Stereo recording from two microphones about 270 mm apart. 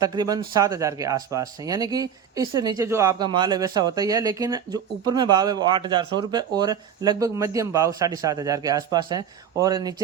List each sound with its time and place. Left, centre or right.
0.0 s speech: centre